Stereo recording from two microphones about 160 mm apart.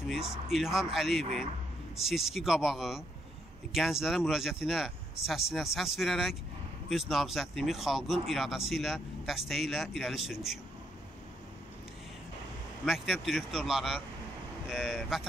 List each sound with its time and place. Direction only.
0.5 s speech: centre (ahead or behind)
12.8 s speech: 5° right (ahead or behind)